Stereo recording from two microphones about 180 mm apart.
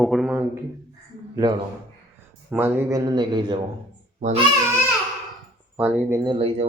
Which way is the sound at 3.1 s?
25° right (ahead or behind).